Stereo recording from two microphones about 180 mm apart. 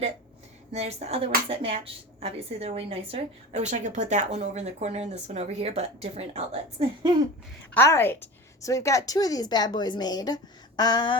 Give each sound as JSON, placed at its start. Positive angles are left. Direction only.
{"t": 0.7, "sound": "a woman's voice", "side_deg": -35}
{"t": 7.7, "sound": "a woman's voice", "side_deg": 15}